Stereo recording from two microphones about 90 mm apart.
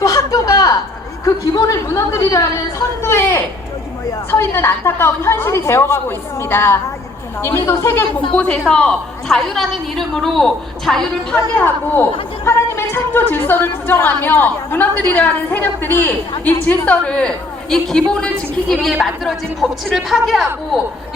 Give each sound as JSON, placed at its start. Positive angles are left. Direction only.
{"t": 0.0, "sound": "a sound", "side_deg": 40}
{"t": 4.3, "sound": "a woman's voice", "side_deg": 25}
{"t": 8.3, "sound": "a woman's voice", "side_deg": 10}
{"t": 11.5, "sound": "a woman's voice", "side_deg": 20}